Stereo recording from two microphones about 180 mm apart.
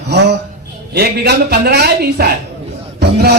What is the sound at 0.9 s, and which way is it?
Music, 60° right (ahead or behind).